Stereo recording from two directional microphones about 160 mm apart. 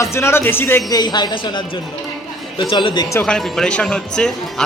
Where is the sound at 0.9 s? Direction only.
25° left (ahead or behind).